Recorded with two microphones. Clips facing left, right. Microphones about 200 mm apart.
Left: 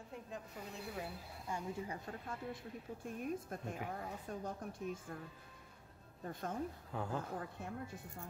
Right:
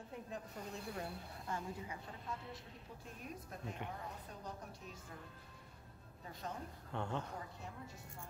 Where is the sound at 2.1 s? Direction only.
50° left (ahead or behind).